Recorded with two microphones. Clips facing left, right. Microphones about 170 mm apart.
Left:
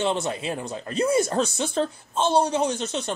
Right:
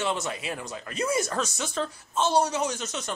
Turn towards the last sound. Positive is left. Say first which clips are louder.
# left 5 dB
turn(degrees=30)  # may be behind; listen again after turning